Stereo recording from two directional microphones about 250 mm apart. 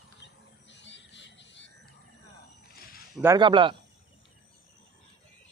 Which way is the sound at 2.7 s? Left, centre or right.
Left.